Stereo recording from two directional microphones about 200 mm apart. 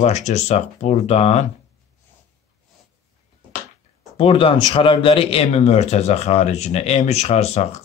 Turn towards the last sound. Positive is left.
turn(degrees=30)  # may be behind; listen again after turning